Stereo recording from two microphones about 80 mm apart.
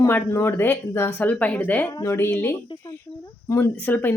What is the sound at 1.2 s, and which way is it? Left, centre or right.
Speech, centre.